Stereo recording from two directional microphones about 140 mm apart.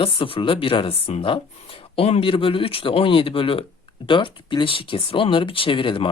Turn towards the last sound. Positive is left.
turn(degrees=35)  # may be behind; listen again after turning